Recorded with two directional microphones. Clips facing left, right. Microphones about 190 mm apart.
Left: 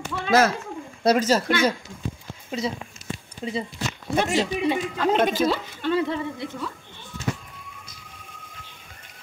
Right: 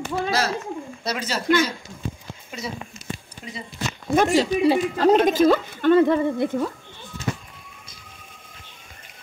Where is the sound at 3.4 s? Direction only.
30° left (ahead or behind).